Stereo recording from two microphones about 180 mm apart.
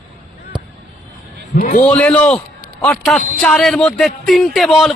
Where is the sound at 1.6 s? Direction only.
40° left (ahead or behind).